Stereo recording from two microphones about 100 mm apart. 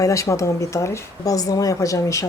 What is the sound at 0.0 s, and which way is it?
Speech, 30° left (ahead or behind).